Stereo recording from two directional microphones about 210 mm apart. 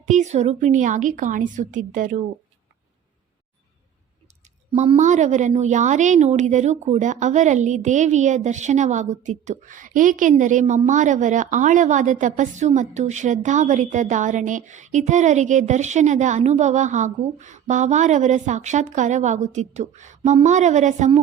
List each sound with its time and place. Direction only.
0.0 s a woman's voice: 35° right (ahead or behind)
4.7 s a woman's voice: 30° right (ahead or behind)